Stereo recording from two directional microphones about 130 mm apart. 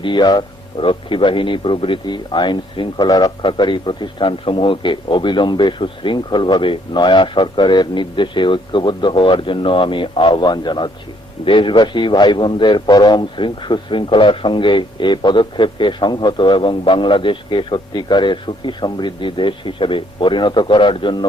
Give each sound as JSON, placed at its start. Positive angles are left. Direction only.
{"t": 0.0, "sound": "a man's voice", "side_deg": 35}